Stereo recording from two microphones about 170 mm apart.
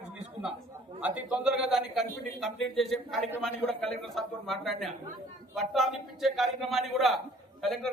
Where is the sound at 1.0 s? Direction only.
5° right (ahead or behind).